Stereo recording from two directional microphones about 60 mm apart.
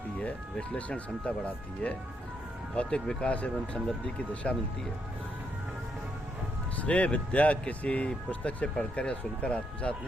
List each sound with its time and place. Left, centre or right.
0.5 s speech: centre
6.7 s speech: left